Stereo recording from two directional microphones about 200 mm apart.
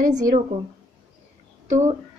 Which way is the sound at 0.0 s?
45° right (ahead or behind).